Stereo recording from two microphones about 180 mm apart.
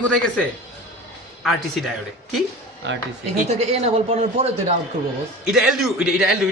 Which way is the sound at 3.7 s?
35° right (ahead or behind).